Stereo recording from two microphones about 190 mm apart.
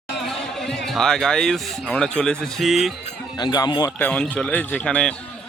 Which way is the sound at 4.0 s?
10° left (ahead or behind).